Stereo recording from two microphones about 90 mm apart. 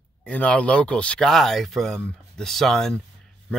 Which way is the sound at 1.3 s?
Centre (ahead or behind).